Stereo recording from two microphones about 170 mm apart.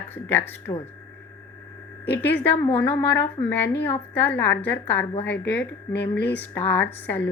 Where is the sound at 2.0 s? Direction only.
80° left.